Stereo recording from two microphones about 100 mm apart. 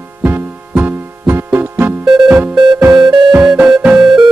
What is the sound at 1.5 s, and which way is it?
Music, 20° right (ahead or behind).